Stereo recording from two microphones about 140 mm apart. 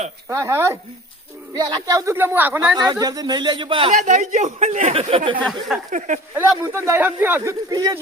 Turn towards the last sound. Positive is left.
turn(degrees=-30)  # may be behind; listen again after turning